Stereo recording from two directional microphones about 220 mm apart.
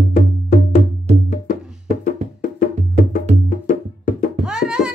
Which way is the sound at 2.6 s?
40° left (ahead or behind).